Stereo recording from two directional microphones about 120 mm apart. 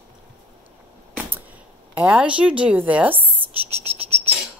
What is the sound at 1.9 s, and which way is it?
Speech, 10° right (ahead or behind).